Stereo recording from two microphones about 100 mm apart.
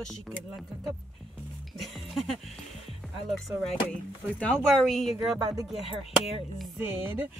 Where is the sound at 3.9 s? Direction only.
15° left (ahead or behind).